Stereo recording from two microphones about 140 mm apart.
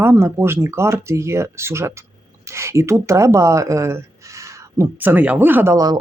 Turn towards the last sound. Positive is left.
turn(degrees=-25)  # may be behind; listen again after turning